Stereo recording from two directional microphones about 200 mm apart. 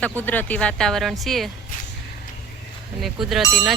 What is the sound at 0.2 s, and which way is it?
Speech, 10° left (ahead or behind).